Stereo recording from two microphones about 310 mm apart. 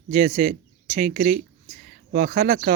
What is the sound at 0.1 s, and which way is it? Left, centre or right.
A man's voice, right.